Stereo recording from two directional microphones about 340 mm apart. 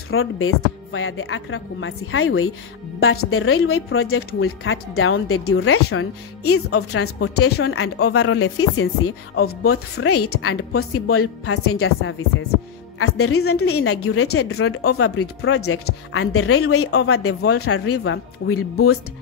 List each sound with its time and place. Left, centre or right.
0.1 s a woman's voice: left
9.9 s a woman's voice: left